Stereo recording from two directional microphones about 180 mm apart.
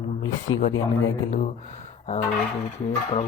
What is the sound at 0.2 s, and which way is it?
Speech, 90° left.